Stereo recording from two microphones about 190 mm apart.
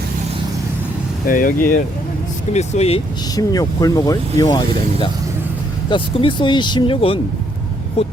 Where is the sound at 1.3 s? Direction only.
45° left (ahead or behind).